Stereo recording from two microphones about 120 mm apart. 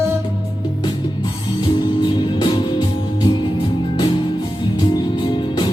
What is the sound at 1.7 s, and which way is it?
Music, 40° left (ahead or behind).